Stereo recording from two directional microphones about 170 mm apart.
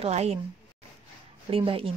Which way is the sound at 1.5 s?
30° right (ahead or behind).